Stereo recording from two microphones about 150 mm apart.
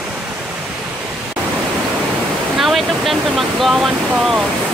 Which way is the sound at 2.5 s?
Centre (ahead or behind).